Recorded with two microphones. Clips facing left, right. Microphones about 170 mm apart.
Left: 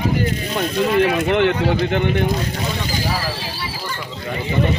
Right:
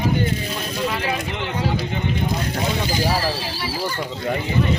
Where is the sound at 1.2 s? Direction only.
65° left (ahead or behind).